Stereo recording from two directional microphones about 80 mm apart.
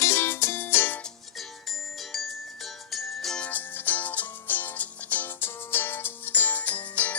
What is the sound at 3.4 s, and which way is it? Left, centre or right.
Music, left.